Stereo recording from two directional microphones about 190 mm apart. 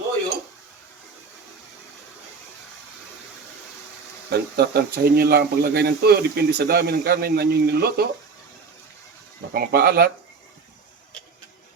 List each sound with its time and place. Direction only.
4.3 s speech: 60° right (ahead or behind)
9.5 s speech: 55° right (ahead or behind)